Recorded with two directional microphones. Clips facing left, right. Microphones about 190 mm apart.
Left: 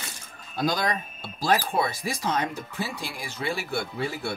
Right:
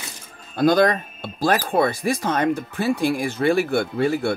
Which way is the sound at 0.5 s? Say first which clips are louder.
Right 10 dB; 55° right (ahead or behind).